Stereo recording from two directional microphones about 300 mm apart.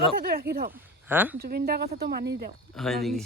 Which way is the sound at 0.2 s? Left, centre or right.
Right.